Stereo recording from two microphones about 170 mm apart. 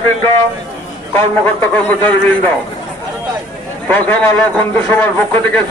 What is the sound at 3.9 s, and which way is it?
A man's voice, 10° left (ahead or behind).